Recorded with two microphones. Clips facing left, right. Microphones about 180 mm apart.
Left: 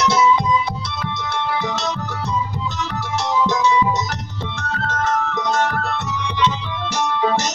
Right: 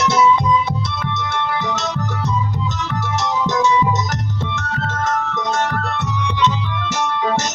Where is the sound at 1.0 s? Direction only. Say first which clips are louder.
Left 2 dB; 55° right (ahead or behind).